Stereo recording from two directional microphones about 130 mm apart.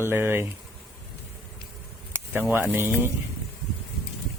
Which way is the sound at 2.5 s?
15° right (ahead or behind).